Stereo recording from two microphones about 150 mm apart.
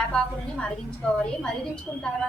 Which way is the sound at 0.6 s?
5° left (ahead or behind).